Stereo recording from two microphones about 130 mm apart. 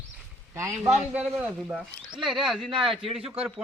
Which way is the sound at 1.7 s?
Centre (ahead or behind).